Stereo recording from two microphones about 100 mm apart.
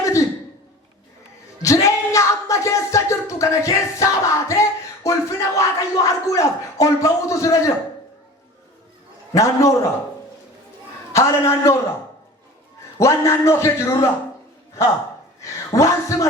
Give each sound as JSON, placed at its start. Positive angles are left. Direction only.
{"t": 0.0, "sound": "a sound", "side_deg": 30}
{"t": 1.6, "sound": "music", "side_deg": 30}
{"t": 5.0, "sound": "speech", "side_deg": 30}
{"t": 9.3, "sound": "speech", "side_deg": 30}
{"t": 11.1, "sound": "a man's voice", "side_deg": 30}
{"t": 13.0, "sound": "a man's voice", "side_deg": 25}
{"t": 15.4, "sound": "a woman's voice", "side_deg": 30}